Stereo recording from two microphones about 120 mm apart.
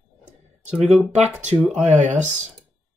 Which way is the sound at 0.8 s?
5° right (ahead or behind).